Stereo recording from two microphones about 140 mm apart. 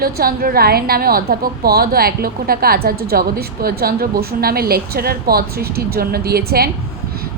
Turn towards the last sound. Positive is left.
turn(degrees=-90)